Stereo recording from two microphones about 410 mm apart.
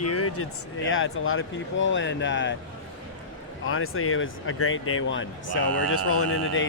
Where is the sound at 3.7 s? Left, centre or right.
Left.